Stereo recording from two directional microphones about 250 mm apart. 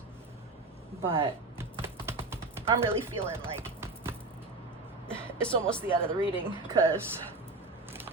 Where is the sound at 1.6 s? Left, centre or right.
Centre.